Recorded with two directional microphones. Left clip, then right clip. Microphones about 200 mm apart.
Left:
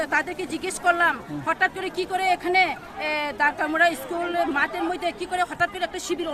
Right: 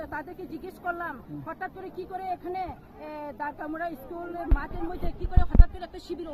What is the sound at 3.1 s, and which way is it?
Speech, 20° left (ahead or behind).